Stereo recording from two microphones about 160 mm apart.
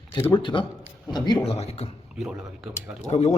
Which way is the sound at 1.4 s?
40° left (ahead or behind).